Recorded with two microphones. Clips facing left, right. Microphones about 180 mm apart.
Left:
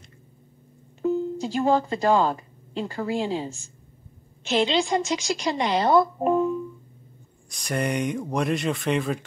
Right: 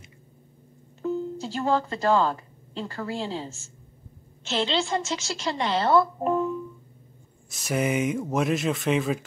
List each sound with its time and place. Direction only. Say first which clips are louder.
1.0 s a woman's voice: left 4 dB; 15° left (ahead or behind)
7.4 s speech: right 1 dB; 5° right (ahead or behind)